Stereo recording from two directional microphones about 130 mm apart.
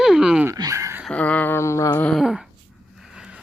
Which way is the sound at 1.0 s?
10° left (ahead or behind).